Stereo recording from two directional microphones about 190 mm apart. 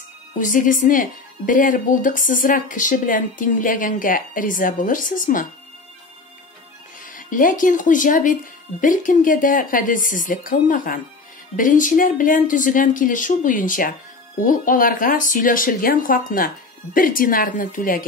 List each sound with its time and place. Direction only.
0.4 s speech: 45° left (ahead or behind)
7.0 s speech: 45° left (ahead or behind)